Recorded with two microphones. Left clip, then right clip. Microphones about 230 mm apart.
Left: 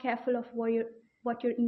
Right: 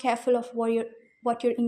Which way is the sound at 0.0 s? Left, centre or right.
Right.